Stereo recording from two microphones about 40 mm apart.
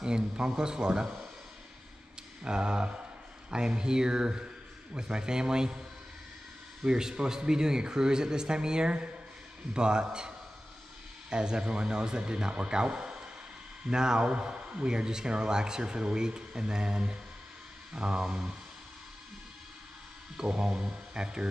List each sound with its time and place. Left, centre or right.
0.0 s speech: centre
2.4 s speech: right
6.8 s speech: centre
20.3 s speech: centre